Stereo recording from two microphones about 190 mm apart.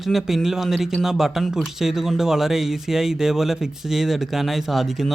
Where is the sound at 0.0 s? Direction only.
Centre (ahead or behind).